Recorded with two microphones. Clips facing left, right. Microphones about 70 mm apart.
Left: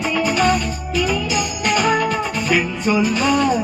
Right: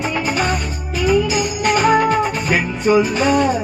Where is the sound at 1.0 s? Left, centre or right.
Right.